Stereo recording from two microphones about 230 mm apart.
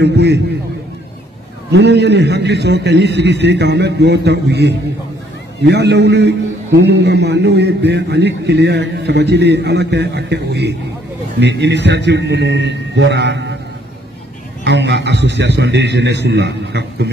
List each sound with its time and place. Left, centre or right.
0.0 s a man's voice: right
1.7 s a man's voice: right
14.6 s a man's voice: right